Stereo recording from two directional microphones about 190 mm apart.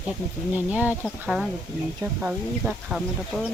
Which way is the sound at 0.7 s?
10° right (ahead or behind).